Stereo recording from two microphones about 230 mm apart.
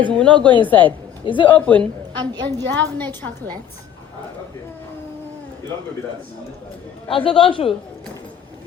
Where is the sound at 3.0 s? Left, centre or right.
Centre.